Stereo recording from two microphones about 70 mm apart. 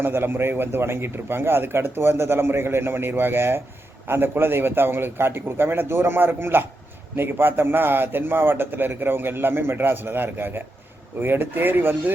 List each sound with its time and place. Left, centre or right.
0.0 s a man's voice: right